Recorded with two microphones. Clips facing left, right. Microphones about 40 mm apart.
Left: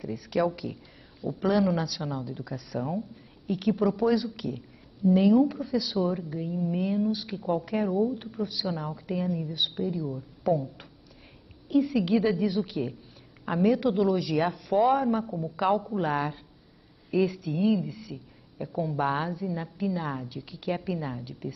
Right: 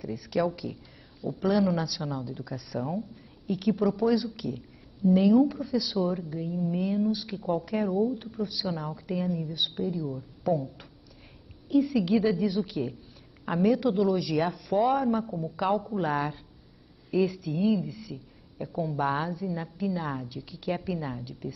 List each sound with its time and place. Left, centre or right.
0.0 s speech: centre